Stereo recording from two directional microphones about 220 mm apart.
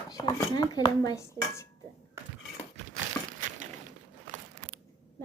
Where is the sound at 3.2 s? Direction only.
15° left (ahead or behind).